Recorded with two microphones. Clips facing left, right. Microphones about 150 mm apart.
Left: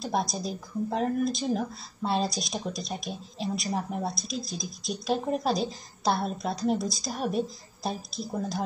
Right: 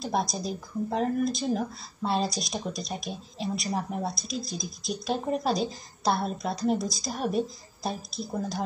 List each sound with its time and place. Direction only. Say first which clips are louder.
0.0 s speech: even; centre (ahead or behind)